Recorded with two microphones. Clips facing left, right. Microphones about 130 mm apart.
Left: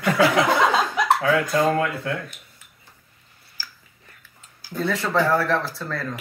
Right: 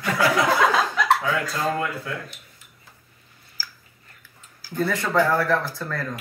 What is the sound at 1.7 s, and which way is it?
Speech, 65° left (ahead or behind).